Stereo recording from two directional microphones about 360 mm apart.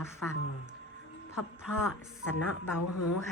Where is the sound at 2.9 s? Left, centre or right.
Left.